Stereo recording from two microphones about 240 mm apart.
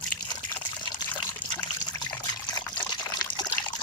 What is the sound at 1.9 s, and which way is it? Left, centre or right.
Trickle, centre.